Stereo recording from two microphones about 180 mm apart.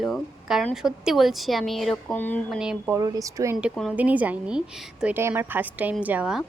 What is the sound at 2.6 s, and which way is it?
Speech, 5° right (ahead or behind).